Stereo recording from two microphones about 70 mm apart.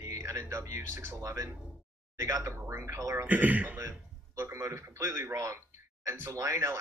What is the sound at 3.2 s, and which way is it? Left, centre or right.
Speech, right.